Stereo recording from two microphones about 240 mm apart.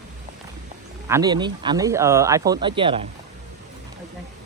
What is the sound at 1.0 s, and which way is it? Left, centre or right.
Speech, centre.